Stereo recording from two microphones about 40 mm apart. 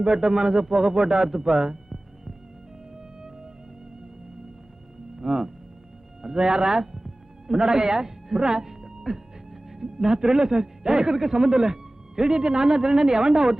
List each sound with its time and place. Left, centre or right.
0.0 s a man's voice: centre
1.3 s music: centre
5.1 s a man's voice: centre